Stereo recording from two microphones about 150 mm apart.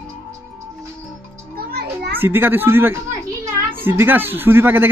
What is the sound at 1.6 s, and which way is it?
Children playing, 90° right.